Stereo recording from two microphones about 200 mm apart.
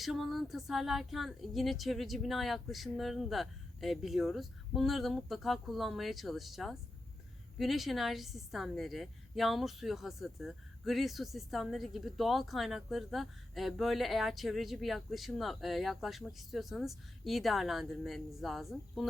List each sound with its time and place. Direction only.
0.0 s a woman's voice: centre (ahead or behind)